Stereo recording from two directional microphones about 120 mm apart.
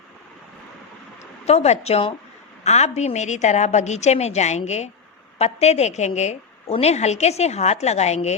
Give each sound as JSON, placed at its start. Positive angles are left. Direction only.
{"t": 1.2, "sound": "a woman's voice", "side_deg": 65}